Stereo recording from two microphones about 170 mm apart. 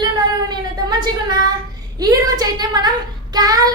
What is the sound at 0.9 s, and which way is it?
A woman's voice, 25° right (ahead or behind).